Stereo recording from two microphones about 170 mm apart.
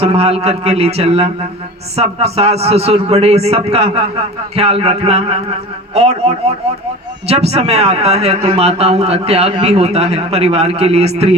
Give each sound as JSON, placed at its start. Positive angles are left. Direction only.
{"t": 0.0, "sound": "a man's voice", "side_deg": -35}